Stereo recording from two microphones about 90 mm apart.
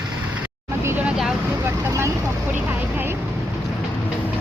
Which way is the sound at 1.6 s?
30° right (ahead or behind).